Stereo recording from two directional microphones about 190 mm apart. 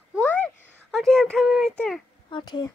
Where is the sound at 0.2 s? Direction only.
10° left (ahead or behind).